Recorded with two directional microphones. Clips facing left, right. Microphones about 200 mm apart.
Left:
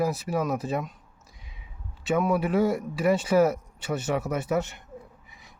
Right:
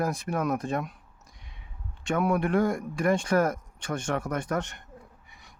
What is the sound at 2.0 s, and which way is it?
Speech, 5° left (ahead or behind).